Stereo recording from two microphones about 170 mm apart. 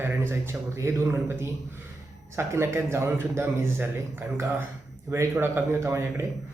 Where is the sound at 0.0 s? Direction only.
15° right (ahead or behind).